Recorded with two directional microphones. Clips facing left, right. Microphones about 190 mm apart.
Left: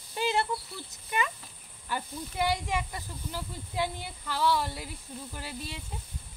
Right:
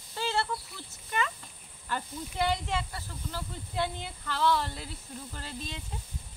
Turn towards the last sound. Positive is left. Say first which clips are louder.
# left 1 dB
turn(degrees=10)  # may be behind; listen again after turning